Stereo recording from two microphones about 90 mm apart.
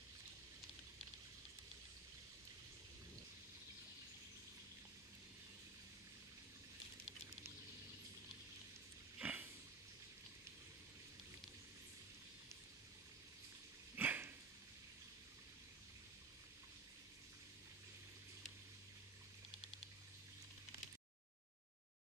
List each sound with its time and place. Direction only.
9.2 s pig: 20° right (ahead or behind)
13.9 s dog: 20° right (ahead or behind)